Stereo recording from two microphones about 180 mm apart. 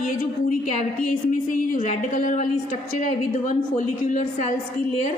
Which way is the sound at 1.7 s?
45° left (ahead or behind).